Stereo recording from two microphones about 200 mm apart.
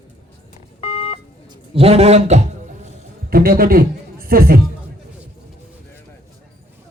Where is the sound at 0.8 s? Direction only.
25° left (ahead or behind).